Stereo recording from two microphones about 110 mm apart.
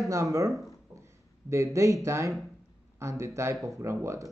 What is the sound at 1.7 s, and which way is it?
A man's voice, 30° right (ahead or behind).